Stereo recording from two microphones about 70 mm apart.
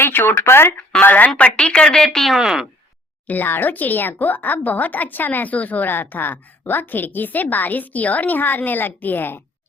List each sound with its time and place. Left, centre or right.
0.0 s speech: left
1.0 s speech: left; by 2.3 s centre
2.3 s speech: centre
3.2 s speech: left